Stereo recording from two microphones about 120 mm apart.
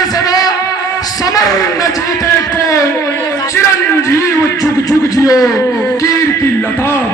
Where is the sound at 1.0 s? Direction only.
30° left (ahead or behind).